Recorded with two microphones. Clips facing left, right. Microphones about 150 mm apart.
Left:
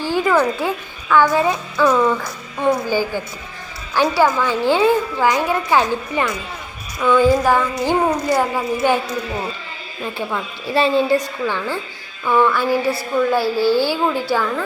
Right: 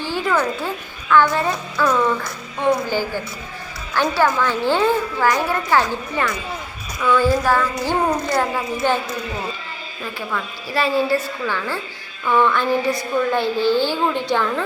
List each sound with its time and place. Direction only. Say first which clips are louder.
0.0 s a sound: left 4 dB; 10° left (ahead or behind)
1.1 s a woman's voice: left 2 dB; 10° left (ahead or behind)
3.9 s a woman's voice: left 2 dB; 15° left (ahead or behind)
10.2 s a woman's voice: left 1 dB; 25° left (ahead or behind); by 14.6 s 5° left (ahead or behind)